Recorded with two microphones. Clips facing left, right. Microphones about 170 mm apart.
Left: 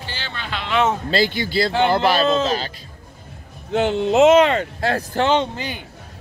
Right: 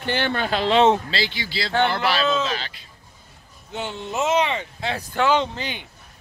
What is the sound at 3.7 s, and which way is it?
Speech, 85° left.